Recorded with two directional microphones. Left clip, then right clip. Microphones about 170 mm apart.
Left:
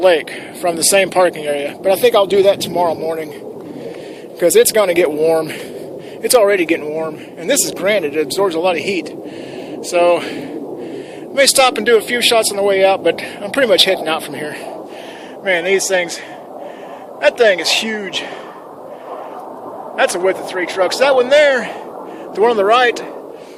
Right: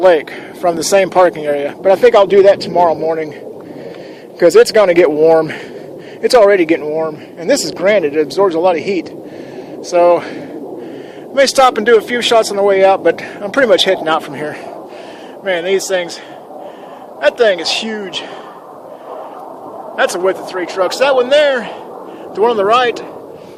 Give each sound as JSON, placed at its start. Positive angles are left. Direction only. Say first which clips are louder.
{"t": 0.0, "sound": "speech", "louder": "right 3 dB", "side_deg": -30}
{"t": 4.4, "sound": "speech", "louder": "right 4 dB", "side_deg": -40}
{"t": 15.4, "sound": "speech", "louder": "even", "side_deg": -10}
{"t": 17.2, "sound": "speech", "louder": "even", "side_deg": -10}
{"t": 20.0, "sound": "speech", "louder": "right 1 dB", "side_deg": -10}